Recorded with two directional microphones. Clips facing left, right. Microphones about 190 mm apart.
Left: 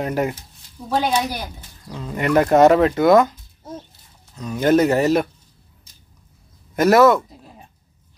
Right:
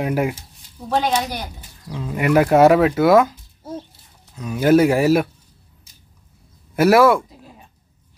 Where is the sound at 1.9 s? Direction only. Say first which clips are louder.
Right 2 dB; 5° right (ahead or behind).